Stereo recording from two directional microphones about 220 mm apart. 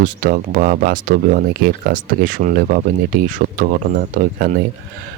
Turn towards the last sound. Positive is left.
turn(degrees=-40)  # may be behind; listen again after turning